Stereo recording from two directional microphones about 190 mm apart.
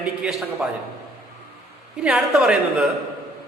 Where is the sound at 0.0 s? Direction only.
5° right (ahead or behind).